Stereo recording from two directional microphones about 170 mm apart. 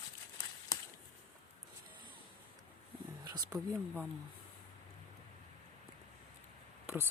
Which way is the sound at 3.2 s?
25° right (ahead or behind).